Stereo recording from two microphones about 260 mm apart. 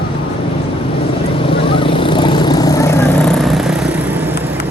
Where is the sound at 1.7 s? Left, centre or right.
Centre.